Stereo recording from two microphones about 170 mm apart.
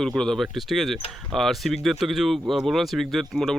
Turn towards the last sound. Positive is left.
turn(degrees=0)  # may be behind; listen again after turning